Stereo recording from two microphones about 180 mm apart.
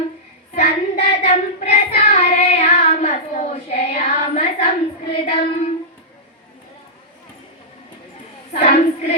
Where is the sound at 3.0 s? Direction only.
40° left (ahead or behind).